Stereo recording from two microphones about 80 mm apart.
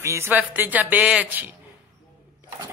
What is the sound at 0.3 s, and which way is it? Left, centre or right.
A man's voice, right.